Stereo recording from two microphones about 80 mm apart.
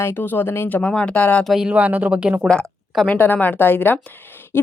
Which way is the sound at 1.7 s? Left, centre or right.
Centre.